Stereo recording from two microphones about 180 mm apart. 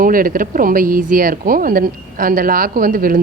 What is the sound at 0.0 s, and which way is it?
Speech, 50° right (ahead or behind).